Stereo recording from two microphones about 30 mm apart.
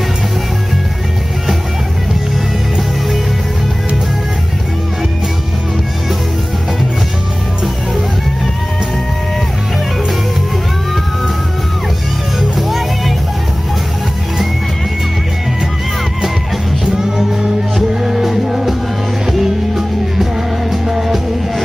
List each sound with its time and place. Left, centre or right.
12.4 s music: centre
16.8 s music: right
17.7 s music: centre